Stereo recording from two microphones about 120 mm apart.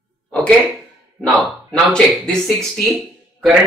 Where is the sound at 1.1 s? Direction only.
5° left (ahead or behind).